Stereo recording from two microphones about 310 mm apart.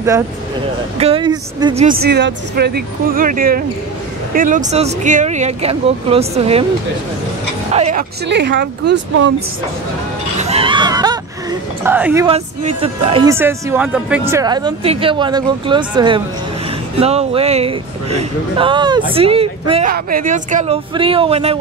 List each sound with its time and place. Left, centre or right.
0.9 s speech: centre
7.7 s speech: right
8.3 s speech: right
10.4 s a sound: centre
11.8 s speech: centre
12.3 s speech: centre